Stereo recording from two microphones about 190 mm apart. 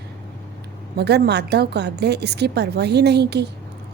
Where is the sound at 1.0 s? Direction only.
60° right (ahead or behind).